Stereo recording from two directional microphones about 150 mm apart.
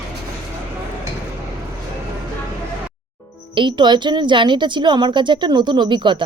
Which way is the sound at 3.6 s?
30° right (ahead or behind).